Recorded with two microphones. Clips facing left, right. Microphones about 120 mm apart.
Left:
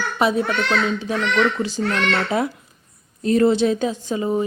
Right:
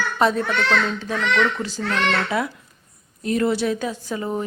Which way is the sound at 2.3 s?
25° left (ahead or behind).